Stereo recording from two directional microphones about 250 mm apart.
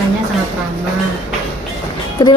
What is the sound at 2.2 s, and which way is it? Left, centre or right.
Speech, centre.